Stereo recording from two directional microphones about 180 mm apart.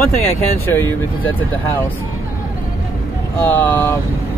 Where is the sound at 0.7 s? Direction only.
10° left (ahead or behind).